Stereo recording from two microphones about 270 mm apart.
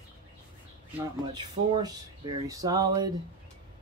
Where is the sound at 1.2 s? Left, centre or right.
Centre.